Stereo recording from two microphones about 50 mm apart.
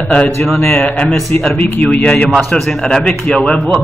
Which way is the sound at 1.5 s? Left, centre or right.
Left.